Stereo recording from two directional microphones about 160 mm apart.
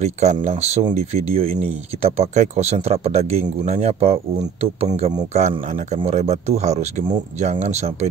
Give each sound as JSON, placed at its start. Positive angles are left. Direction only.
{"t": 0.0, "sound": "speech", "side_deg": -45}